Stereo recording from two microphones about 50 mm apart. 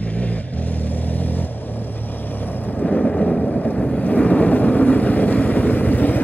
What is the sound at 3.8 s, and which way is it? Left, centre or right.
Vehicle, left.